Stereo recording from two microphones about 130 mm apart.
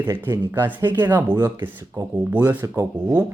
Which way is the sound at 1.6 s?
15° right (ahead or behind).